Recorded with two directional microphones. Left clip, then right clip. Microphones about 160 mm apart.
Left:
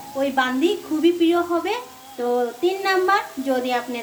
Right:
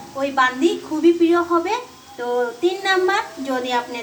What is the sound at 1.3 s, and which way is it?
Speech, 25° left (ahead or behind).